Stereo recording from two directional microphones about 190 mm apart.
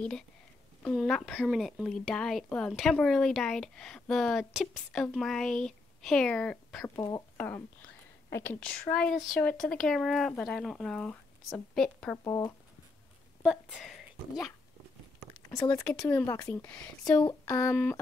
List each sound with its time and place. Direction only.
0.8 s speech: 5° left (ahead or behind)
7.0 s speech: 15° left (ahead or behind)
12.3 s speech: 15° left (ahead or behind)
13.4 s speech: 5° right (ahead or behind)
15.5 s speech: 15° left (ahead or behind)